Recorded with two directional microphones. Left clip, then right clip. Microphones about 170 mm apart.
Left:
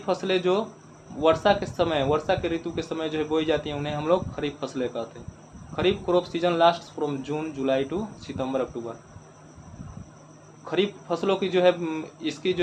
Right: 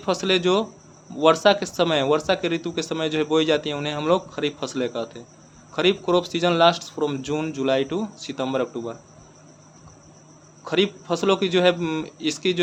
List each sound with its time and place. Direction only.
0.0 s speech: 50° right (ahead or behind)
10.7 s speech: 50° right (ahead or behind)